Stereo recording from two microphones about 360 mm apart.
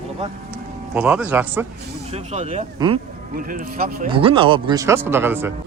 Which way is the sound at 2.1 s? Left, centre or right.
Centre.